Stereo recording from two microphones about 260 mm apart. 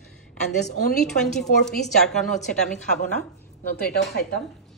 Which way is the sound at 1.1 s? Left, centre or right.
Centre.